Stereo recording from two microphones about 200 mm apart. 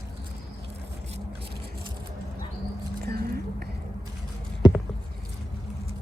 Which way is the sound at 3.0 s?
50° right (ahead or behind).